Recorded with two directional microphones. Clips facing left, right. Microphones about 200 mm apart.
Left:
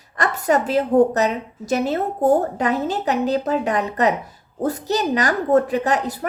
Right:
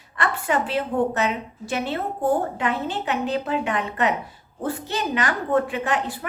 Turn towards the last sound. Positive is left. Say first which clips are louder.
# left 5 dB
turn(degrees=40)  # may be behind; listen again after turning